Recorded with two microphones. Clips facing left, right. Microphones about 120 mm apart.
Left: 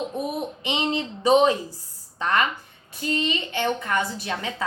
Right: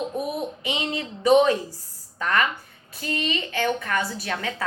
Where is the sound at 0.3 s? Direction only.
25° left (ahead or behind).